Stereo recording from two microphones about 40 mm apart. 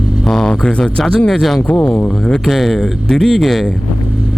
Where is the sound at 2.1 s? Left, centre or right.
Centre.